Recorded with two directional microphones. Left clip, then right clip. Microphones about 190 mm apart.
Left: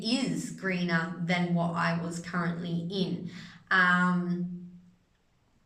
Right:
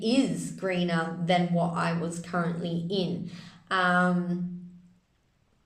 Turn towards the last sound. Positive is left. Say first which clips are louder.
# right 1 dB
turn(degrees=-15)  # may be behind; listen again after turning